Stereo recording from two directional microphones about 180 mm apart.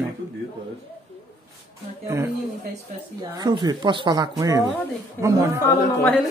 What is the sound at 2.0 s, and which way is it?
Speech, 15° right (ahead or behind).